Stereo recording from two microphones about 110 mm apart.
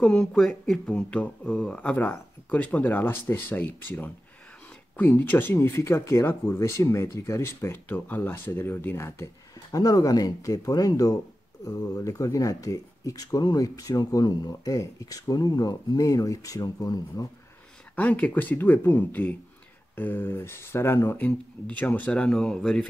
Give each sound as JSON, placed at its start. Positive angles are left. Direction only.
{"t": 0.0, "sound": "speech", "side_deg": 5}
{"t": 17.9, "sound": "speech", "side_deg": 15}
{"t": 21.6, "sound": "speech", "side_deg": 15}